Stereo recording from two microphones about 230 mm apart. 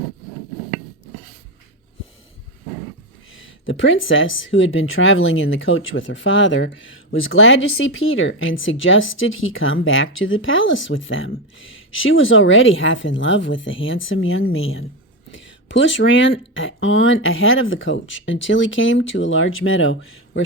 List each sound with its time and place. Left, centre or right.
3.3 s speech: left